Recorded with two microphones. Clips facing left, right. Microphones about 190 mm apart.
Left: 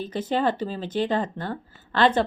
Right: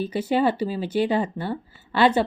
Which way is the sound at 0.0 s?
10° right (ahead or behind).